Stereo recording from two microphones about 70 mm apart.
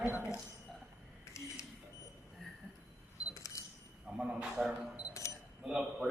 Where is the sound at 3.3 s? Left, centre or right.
Left.